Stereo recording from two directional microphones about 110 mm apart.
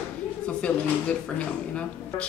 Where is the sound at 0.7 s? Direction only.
10° left (ahead or behind).